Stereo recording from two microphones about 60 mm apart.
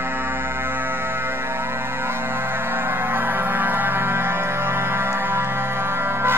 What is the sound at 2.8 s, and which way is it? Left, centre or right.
Music, right.